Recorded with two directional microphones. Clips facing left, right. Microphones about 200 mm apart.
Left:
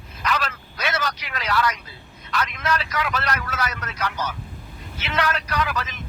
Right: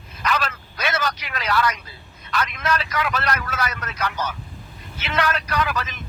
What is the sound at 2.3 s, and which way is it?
Vehicle, 55° right (ahead or behind).